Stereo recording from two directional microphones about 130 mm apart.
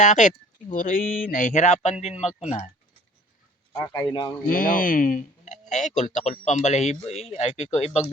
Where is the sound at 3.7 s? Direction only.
25° left (ahead or behind).